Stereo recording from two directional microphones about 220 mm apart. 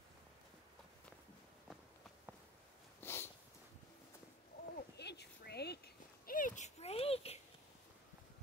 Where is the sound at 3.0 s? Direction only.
10° left (ahead or behind).